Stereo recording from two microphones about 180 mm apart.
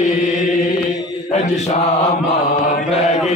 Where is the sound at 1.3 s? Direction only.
35° left (ahead or behind).